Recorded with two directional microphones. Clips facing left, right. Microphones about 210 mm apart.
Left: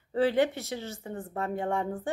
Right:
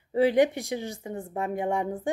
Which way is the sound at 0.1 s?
15° right (ahead or behind).